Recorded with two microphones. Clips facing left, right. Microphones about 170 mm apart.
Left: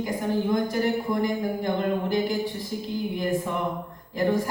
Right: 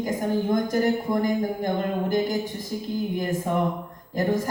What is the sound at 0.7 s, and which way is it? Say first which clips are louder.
A woman's voice: right 2 dB; 45° right (ahead or behind).